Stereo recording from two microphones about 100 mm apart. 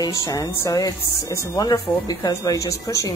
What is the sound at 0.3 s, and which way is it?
A woman's voice, 35° left (ahead or behind).